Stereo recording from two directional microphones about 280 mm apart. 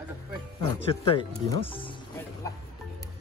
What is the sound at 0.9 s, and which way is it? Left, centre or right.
Speech, centre.